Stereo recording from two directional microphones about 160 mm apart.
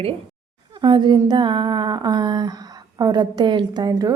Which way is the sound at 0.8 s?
30° right (ahead or behind).